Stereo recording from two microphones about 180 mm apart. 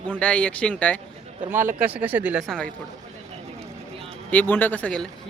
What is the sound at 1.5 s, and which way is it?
Speech, 10° right (ahead or behind).